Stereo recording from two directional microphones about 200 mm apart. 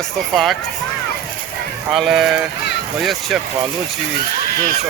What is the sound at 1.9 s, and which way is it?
Speech, centre (ahead or behind).